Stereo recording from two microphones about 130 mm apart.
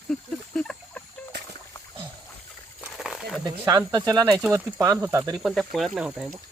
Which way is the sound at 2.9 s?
5° right (ahead or behind).